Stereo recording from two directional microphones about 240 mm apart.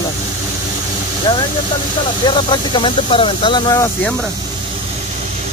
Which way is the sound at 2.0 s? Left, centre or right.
Centre.